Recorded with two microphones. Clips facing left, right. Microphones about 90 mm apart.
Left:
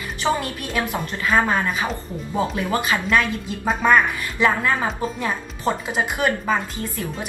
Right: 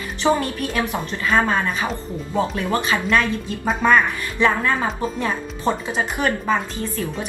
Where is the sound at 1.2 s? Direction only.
5° left (ahead or behind).